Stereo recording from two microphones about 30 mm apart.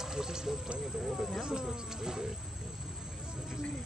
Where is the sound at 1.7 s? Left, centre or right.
Centre.